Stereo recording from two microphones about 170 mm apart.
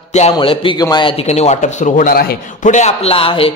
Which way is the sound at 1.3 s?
40° left (ahead or behind).